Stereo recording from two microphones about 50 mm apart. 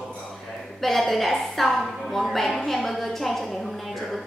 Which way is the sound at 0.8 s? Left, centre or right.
Centre.